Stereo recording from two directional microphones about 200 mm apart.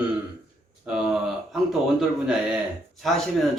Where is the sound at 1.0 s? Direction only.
Centre (ahead or behind).